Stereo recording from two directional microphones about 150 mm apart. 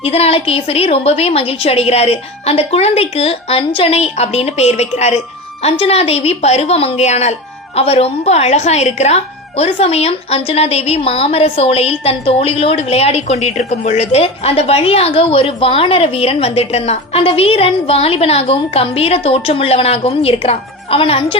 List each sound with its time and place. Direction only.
0.0 s speech: 40° left (ahead or behind)